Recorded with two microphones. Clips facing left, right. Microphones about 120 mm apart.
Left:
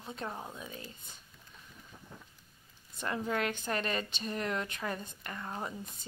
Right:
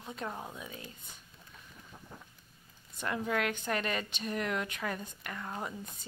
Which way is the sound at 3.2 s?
25° left (ahead or behind).